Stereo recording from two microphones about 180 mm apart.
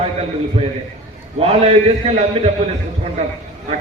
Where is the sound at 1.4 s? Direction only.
35° right (ahead or behind).